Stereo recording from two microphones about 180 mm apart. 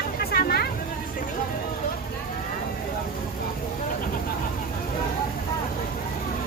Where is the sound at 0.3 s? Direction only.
60° left (ahead or behind).